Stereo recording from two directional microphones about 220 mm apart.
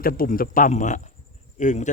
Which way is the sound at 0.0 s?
40° left (ahead or behind).